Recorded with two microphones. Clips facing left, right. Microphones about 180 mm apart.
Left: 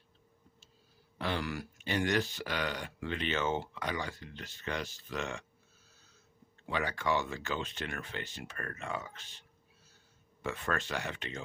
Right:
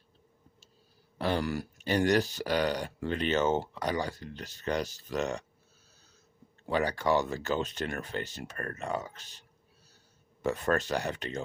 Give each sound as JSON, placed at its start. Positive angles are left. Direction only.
{"t": 1.2, "sound": "speech", "side_deg": -40}
{"t": 6.7, "sound": "speech", "side_deg": -40}
{"t": 10.4, "sound": "speech", "side_deg": -40}